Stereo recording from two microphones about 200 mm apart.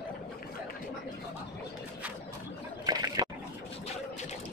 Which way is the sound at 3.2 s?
20° right (ahead or behind).